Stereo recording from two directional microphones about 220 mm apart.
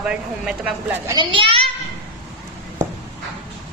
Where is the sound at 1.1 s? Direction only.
20° right (ahead or behind).